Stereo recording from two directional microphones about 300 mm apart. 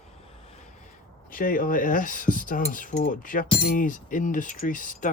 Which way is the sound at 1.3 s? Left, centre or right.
Left.